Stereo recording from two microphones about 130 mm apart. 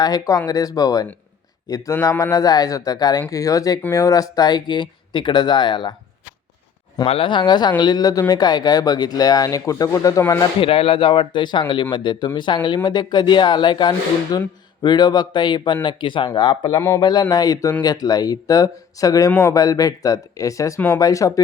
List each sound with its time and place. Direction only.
0.0 s speech: 30° left (ahead or behind)
7.1 s speech: 40° left (ahead or behind); by 10.4 s 25° left (ahead or behind)
10.4 s speech: 45° left (ahead or behind); by 21.4 s 25° left (ahead or behind)